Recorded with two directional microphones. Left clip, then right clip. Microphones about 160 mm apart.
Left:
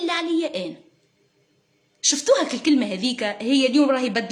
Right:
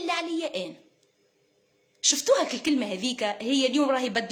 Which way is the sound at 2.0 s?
15° left (ahead or behind).